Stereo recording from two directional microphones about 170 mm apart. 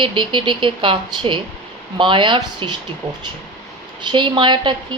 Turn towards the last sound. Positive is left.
turn(degrees=-25)  # may be behind; listen again after turning